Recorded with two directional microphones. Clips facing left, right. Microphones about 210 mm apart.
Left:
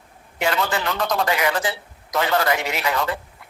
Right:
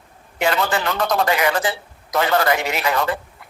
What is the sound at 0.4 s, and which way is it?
Speech, 50° right (ahead or behind).